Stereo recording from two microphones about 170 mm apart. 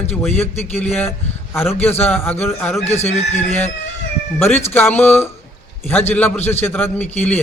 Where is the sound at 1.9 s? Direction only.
10° left (ahead or behind).